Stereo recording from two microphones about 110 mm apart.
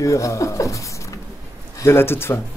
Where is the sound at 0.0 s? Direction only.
30° left (ahead or behind).